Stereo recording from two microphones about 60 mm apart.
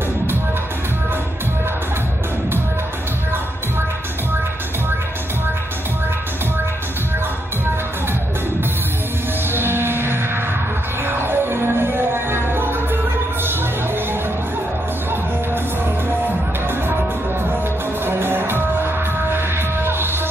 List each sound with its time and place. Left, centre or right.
9.5 s music: right
18.0 s music: right